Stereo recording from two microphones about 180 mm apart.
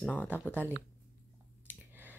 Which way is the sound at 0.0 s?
Centre (ahead or behind).